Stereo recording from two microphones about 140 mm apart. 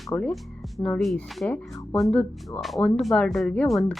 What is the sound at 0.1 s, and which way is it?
Speech, 15° left (ahead or behind).